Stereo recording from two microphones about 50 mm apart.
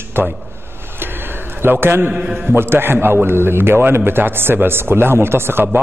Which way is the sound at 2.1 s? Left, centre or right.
Right.